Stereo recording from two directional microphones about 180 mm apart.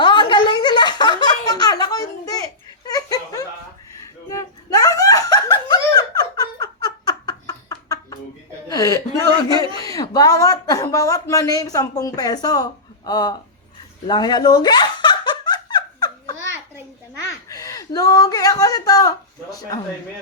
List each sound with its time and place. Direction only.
0.0 s a sound: 25° left (ahead or behind)
2.9 s laughter: 20° left (ahead or behind)
8.7 s chuckle: 20° left (ahead or behind)
9.8 s speech: 20° left (ahead or behind)
14.1 s giggle: 25° left (ahead or behind)
17.5 s a sound: 20° left (ahead or behind)